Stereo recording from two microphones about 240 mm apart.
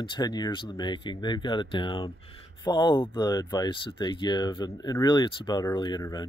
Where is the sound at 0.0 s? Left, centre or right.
Centre.